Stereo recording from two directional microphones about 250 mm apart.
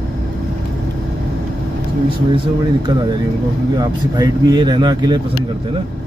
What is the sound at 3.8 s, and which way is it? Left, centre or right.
Speech, centre.